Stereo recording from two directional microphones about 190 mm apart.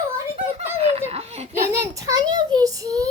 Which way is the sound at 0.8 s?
35° right (ahead or behind).